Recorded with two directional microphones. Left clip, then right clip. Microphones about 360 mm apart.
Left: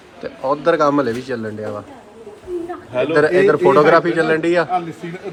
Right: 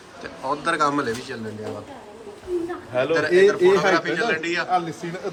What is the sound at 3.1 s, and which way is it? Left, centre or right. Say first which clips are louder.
A man's voice: left 4 dB; centre.